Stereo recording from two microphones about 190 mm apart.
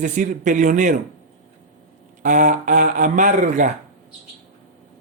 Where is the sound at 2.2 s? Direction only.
40° right (ahead or behind).